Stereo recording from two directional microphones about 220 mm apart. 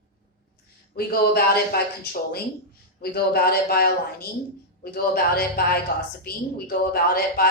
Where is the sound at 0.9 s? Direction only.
45° left (ahead or behind).